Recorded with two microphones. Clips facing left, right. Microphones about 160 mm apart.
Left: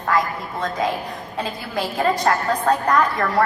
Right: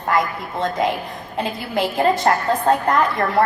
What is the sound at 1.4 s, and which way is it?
A woman's voice, 25° right (ahead or behind).